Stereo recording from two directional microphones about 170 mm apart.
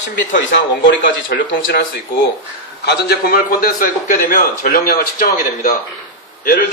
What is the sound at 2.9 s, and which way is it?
A man's voice, 70° left (ahead or behind).